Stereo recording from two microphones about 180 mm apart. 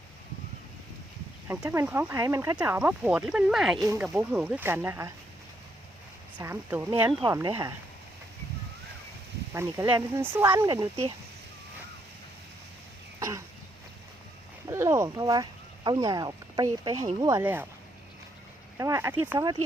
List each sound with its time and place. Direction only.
1.5 s speech: 15° right (ahead or behind)
2.6 s speech: 5° right (ahead or behind)
3.8 s speech: 15° right (ahead or behind)
6.4 s speech: 15° right (ahead or behind)
9.6 s speech: 15° right (ahead or behind)
13.1 s throat clearing: 15° right (ahead or behind)
14.7 s speech: 15° right (ahead or behind)
18.8 s speech: 15° right (ahead or behind)